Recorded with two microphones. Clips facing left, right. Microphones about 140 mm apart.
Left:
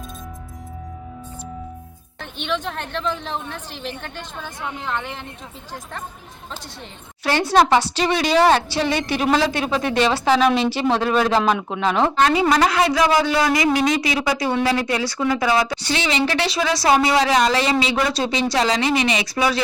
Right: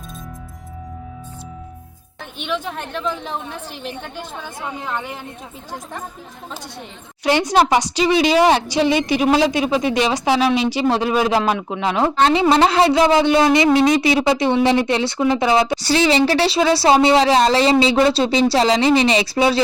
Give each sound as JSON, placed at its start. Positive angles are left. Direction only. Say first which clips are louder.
{"t": 2.4, "sound": "a woman's voice", "louder": "right 1 dB", "side_deg": -5}
{"t": 7.3, "sound": "a woman's voice", "louder": "right 1 dB", "side_deg": -15}
{"t": 12.2, "sound": "speech", "louder": "right 4 dB", "side_deg": -30}
{"t": 15.8, "sound": "speech", "louder": "right 6 dB", "side_deg": -35}